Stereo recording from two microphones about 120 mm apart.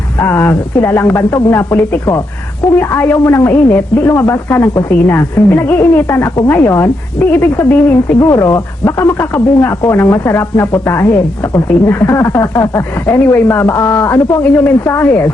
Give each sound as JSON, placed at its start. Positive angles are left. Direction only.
{"t": 0.2, "sound": "speech", "side_deg": 20}